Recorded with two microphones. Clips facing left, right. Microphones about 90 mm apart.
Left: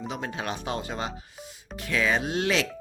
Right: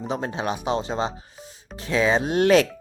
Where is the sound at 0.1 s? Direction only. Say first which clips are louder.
Right 7 dB; 30° right (ahead or behind).